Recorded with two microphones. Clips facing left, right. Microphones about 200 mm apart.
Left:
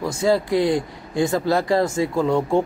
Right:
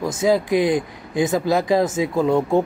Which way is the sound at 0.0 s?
20° right (ahead or behind).